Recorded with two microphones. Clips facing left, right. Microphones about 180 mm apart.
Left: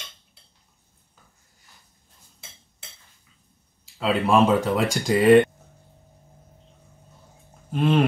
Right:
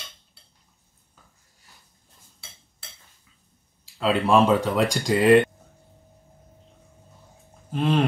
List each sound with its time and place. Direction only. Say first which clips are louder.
4.0 s speech: even; centre (ahead or behind)
7.7 s speech: left 2 dB; centre (ahead or behind)